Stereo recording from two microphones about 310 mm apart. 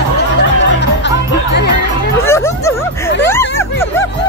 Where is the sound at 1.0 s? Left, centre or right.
Left.